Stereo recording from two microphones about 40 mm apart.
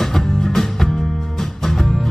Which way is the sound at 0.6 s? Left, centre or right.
Centre.